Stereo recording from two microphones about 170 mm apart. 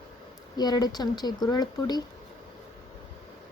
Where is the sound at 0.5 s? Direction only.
25° left (ahead or behind).